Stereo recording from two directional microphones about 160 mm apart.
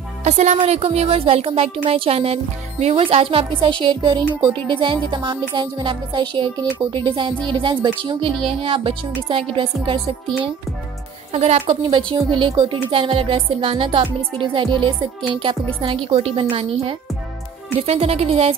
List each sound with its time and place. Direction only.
0.2 s music: 45° right (ahead or behind)
11.3 s music: 40° right (ahead or behind)